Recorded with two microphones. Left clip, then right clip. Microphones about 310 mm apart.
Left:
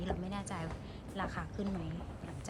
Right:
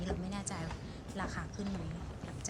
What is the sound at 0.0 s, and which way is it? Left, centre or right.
Music, centre.